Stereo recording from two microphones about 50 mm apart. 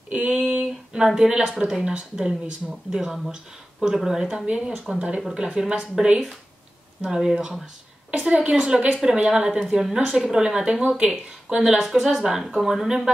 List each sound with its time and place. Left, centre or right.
0.3 s a sound: right
0.9 s a woman's voice: centre
3.8 s a woman's voice: centre
4.9 s a woman's voice: right
8.1 s a woman's voice: right